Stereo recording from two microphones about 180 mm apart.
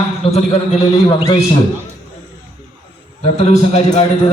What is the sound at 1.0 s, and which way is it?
Speech, 25° left (ahead or behind).